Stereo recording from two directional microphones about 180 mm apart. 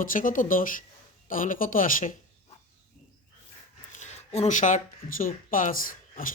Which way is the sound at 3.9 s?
40° left (ahead or behind).